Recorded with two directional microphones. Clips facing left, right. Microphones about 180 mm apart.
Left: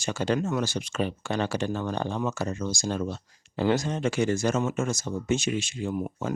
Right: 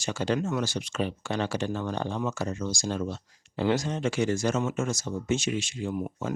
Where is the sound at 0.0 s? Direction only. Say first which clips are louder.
Left 1 dB; 55° left (ahead or behind).